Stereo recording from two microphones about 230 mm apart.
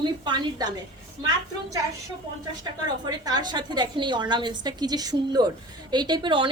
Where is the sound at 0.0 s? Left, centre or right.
Centre.